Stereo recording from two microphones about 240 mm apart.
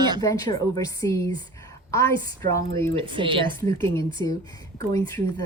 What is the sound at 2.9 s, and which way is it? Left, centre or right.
Speech, right.